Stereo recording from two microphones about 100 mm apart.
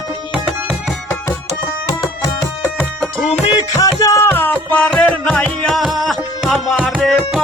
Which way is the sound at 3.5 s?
35° left (ahead or behind).